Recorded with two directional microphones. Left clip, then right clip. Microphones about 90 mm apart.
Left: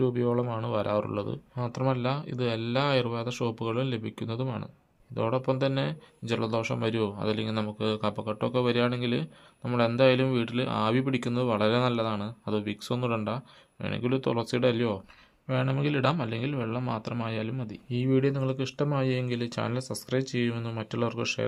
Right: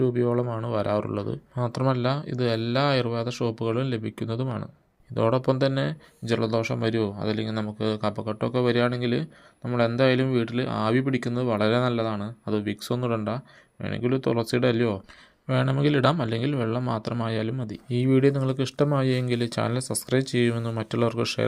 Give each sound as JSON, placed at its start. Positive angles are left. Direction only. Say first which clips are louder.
{"t": 0.0, "sound": "speech", "louder": "right 3 dB", "side_deg": -20}
{"t": 1.5, "sound": "speech", "louder": "right 4 dB", "side_deg": -50}
{"t": 5.1, "sound": "speech", "louder": "right 5 dB", "side_deg": -55}
{"t": 15.4, "sound": "speech", "louder": "right 5 dB", "side_deg": -50}